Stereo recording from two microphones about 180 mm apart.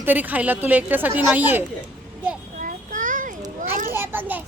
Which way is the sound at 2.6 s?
45° right (ahead or behind).